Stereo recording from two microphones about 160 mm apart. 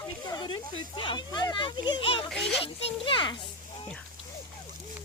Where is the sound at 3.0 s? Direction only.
30° left (ahead or behind).